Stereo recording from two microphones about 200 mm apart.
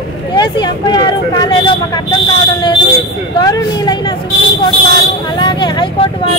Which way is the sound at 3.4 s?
20° left (ahead or behind).